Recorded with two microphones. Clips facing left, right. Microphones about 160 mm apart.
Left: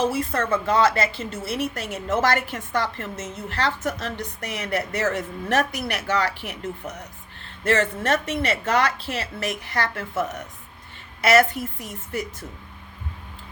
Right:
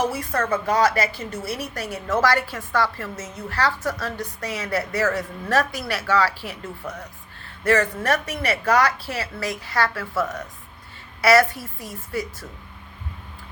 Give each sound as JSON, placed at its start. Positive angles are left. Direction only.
{"t": 0.0, "sound": "a woman's voice", "side_deg": 25}